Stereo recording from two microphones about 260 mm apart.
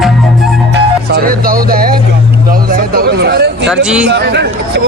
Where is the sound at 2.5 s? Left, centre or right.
Right.